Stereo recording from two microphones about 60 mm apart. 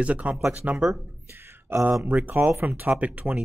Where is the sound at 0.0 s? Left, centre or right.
Right.